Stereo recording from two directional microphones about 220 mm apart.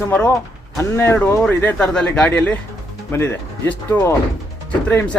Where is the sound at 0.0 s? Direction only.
10° left (ahead or behind).